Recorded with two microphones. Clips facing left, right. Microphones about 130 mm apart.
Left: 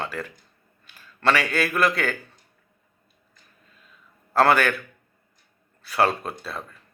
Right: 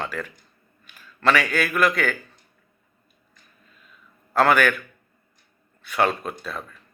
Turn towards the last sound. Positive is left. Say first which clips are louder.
# right 1 dB
turn(degrees=30)  # may be behind; listen again after turning